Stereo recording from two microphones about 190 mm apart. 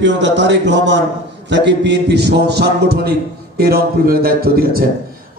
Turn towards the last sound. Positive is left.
turn(degrees=-50)  # may be behind; listen again after turning